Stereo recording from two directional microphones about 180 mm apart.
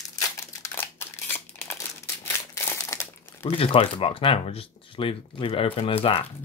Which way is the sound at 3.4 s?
30° left (ahead or behind).